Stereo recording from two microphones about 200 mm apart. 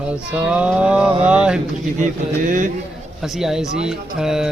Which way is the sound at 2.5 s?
40° right (ahead or behind).